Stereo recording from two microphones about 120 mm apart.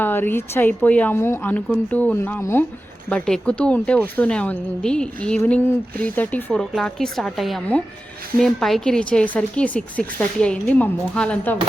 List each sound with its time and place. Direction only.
0.0 s speech: 15° left (ahead or behind)
3.1 s speech: 5° left (ahead or behind)